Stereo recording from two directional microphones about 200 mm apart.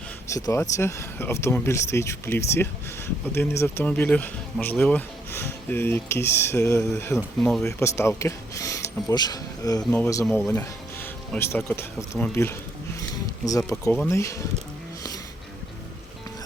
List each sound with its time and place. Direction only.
0.3 s speech: 15° left (ahead or behind)
7.2 s speech: centre (ahead or behind)
7.6 s speech: 15° left (ahead or behind)
13.0 s a sound: 15° left (ahead or behind)
14.1 s speech: 15° left (ahead or behind)